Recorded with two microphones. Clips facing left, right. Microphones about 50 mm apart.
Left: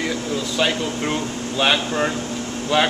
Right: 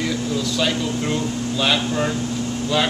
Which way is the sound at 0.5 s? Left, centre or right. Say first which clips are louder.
Left 3 dB; left.